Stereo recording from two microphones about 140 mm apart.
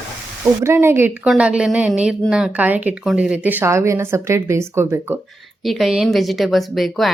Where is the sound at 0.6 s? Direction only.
20° right (ahead or behind).